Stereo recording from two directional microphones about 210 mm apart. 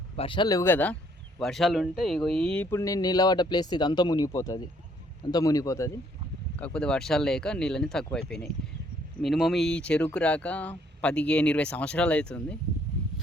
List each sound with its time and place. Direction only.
0.2 s speech: 25° left (ahead or behind)
6.6 s speech: 5° left (ahead or behind)